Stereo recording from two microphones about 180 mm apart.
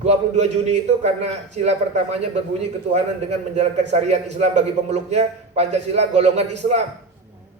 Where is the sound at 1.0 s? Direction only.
35° right (ahead or behind).